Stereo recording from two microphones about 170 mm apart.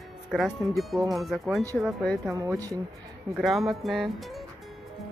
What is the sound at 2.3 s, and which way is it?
Speech, 20° right (ahead or behind).